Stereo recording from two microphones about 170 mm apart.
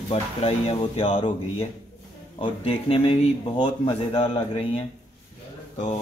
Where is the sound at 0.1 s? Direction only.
35° left (ahead or behind).